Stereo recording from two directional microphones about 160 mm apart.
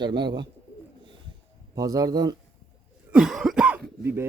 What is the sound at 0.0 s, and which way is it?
Speech, 30° right (ahead or behind).